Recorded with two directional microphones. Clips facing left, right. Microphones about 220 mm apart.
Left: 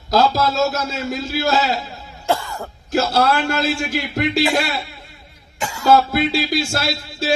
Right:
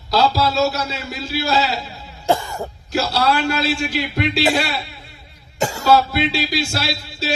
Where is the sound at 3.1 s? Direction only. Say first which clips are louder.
Right 1 dB; 50° left (ahead or behind).